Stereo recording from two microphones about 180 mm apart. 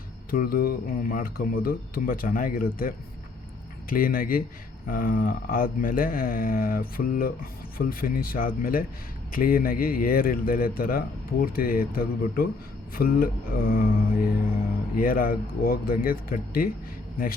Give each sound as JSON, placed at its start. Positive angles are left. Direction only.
{"t": 0.3, "sound": "speech", "side_deg": 55}
{"t": 14.9, "sound": "speech", "side_deg": 50}